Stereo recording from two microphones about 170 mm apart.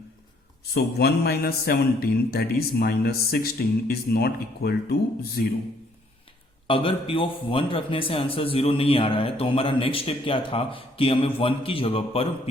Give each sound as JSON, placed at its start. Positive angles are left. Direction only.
{"t": 0.7, "sound": "a man's voice", "side_deg": 70}
{"t": 6.7, "sound": "a man's voice", "side_deg": 30}